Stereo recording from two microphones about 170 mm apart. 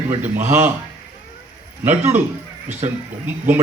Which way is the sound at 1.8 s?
10° right (ahead or behind).